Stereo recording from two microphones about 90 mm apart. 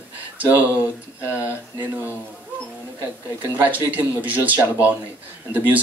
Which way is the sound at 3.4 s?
20° right (ahead or behind).